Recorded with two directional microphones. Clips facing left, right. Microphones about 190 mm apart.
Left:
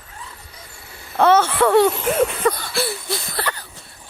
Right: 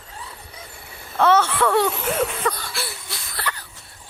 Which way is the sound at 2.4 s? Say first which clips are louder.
Left 6 dB; 30° left (ahead or behind).